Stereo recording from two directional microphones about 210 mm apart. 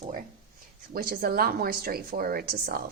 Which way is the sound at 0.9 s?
45° right (ahead or behind).